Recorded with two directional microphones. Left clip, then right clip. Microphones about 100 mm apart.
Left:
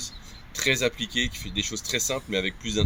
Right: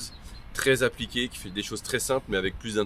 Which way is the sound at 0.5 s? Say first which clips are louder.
Right 1 dB; 50° right (ahead or behind).